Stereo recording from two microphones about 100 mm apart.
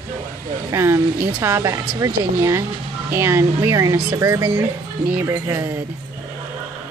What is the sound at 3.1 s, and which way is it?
Speech, 25° right (ahead or behind).